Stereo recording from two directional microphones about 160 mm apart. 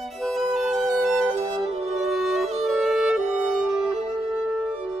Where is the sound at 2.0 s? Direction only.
Centre (ahead or behind).